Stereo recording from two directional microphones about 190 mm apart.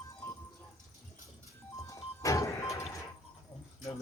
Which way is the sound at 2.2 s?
15° left (ahead or behind).